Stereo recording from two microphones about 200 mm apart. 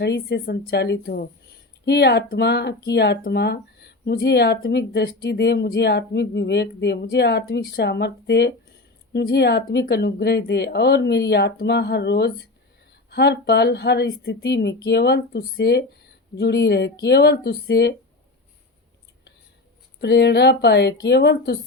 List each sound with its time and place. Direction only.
0.0 s speech: 55° left (ahead or behind)
20.0 s speech: 55° left (ahead or behind)